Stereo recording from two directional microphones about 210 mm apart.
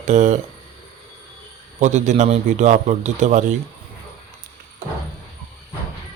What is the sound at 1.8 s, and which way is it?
Speech, 35° right (ahead or behind).